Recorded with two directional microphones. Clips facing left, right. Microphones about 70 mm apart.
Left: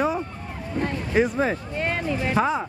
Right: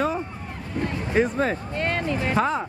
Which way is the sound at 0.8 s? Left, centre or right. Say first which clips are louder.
Left 1 dB; centre.